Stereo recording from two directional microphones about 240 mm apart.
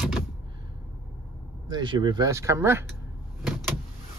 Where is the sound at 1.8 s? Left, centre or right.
Centre.